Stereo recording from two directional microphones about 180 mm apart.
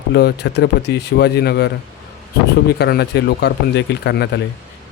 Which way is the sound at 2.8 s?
65° left (ahead or behind).